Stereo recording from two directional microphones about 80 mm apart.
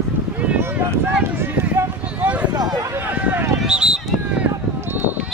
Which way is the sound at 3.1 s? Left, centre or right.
Right.